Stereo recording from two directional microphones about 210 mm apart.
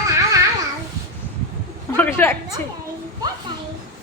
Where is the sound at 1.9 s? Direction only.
10° left (ahead or behind).